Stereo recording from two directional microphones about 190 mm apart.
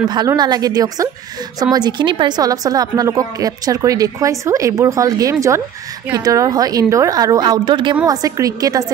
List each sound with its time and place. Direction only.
0.1 s a woman's voice: 20° right (ahead or behind)